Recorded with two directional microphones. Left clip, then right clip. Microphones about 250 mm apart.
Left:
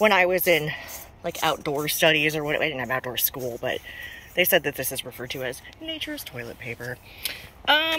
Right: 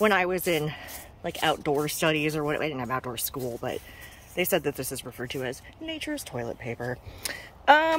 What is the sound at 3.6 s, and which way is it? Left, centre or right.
Speech, centre.